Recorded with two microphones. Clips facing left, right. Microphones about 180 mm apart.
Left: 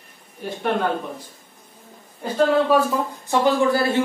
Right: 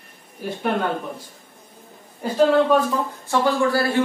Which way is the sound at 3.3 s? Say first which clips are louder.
Left 2 dB; 20° left (ahead or behind).